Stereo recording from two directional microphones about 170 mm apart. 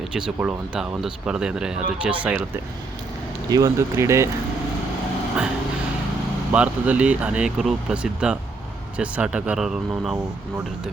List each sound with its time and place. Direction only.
0.1 s speech: 5° right (ahead or behind)
3.5 s speech: 20° right (ahead or behind)
6.5 s speech: 10° right (ahead or behind)